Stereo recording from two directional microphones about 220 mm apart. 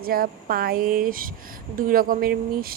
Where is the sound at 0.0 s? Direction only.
40° right (ahead or behind).